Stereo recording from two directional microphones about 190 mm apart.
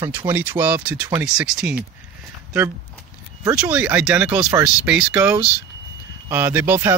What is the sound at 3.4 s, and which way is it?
Speech, 10° right (ahead or behind).